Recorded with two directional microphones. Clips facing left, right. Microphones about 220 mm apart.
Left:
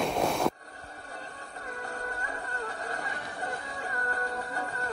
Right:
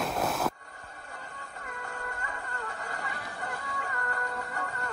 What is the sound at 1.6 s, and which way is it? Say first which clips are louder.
Music: left 3 dB; 35° left (ahead or behind).